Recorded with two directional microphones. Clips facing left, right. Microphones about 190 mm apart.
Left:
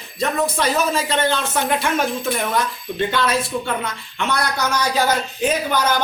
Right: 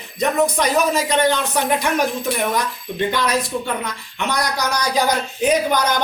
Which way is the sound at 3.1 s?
15° right (ahead or behind).